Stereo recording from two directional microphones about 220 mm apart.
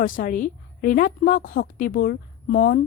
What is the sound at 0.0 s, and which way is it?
A woman's voice, 40° left (ahead or behind).